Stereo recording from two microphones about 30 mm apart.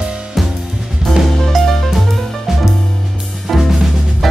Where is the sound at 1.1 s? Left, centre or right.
Centre.